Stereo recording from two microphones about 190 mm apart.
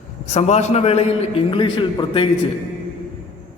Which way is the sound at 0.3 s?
35° left (ahead or behind).